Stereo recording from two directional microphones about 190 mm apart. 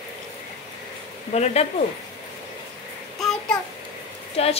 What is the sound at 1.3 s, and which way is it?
Speech, 35° left (ahead or behind).